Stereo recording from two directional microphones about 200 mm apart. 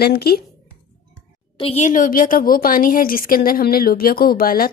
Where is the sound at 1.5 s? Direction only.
30° left (ahead or behind).